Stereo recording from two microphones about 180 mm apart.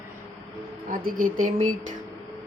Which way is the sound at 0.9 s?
50° right (ahead or behind).